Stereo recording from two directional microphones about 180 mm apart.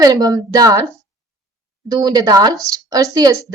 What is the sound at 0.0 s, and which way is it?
Speech, 20° right (ahead or behind).